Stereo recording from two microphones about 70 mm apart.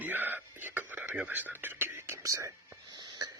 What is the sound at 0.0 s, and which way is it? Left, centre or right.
Whispering, right.